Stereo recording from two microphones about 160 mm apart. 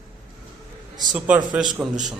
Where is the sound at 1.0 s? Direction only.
5° right (ahead or behind).